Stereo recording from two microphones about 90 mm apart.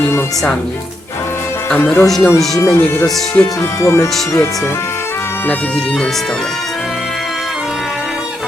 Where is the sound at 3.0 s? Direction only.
5° left (ahead or behind).